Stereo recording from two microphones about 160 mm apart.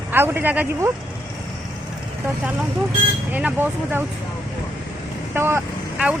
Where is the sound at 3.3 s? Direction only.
10° right (ahead or behind).